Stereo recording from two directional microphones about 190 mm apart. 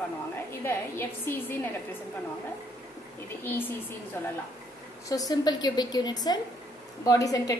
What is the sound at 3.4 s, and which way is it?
Speech, 10° left (ahead or behind).